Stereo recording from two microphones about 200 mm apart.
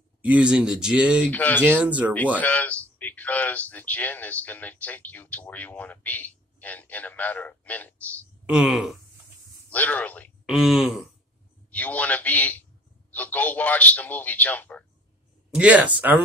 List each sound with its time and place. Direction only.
0.2 s speech: 5° right (ahead or behind)
1.3 s speech: 10° left (ahead or behind)
1.6 s speech: 5° right (ahead or behind)
2.4 s speech: 5° left (ahead or behind)
8.5 s speech: 5° right (ahead or behind)
15.5 s speech: 5° right (ahead or behind)